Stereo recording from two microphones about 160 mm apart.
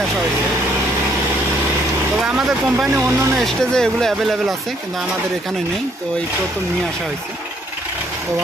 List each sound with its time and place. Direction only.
2.2 s speech: 5° right (ahead or behind)
2.9 s speech: 15° right (ahead or behind)
3.3 s speech: centre (ahead or behind)